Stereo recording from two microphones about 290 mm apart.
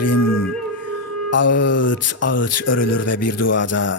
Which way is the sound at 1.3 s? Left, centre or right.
Left.